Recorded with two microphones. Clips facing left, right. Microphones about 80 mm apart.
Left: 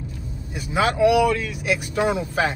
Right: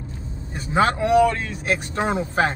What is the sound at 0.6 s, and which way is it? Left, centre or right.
Speech, right.